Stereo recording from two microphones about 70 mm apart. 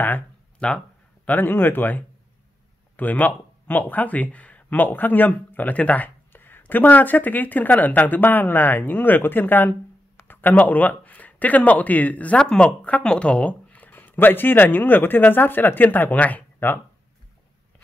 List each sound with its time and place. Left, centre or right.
0.6 s speech: centre
1.2 s speech: left